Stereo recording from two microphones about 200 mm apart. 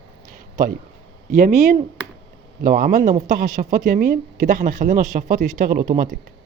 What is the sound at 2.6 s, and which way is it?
Speech, 45° right (ahead or behind).